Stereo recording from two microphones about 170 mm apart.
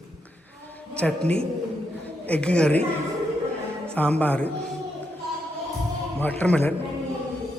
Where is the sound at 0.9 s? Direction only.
5° left (ahead or behind).